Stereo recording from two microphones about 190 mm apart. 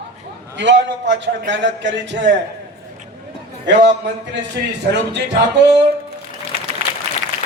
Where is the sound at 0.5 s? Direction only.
65° right (ahead or behind).